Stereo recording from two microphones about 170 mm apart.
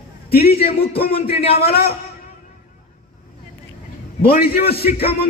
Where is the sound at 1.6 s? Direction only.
65° left (ahead or behind).